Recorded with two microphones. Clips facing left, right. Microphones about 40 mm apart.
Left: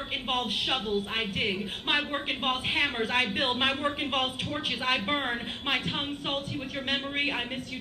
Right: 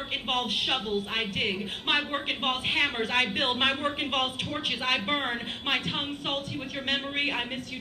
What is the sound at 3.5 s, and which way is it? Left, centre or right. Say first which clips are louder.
A woman's voice: right 1 dB; centre.